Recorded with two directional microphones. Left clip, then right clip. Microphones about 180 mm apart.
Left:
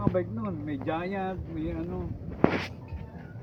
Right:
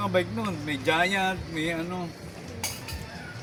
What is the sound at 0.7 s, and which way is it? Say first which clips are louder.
Speech: right 9 dB; 15° right (ahead or behind).